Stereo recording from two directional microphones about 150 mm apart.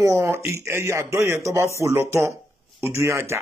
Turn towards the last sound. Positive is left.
turn(degrees=-20)  # may be behind; listen again after turning